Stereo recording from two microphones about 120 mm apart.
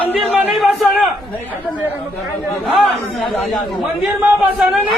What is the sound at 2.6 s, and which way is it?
Speech, centre (ahead or behind).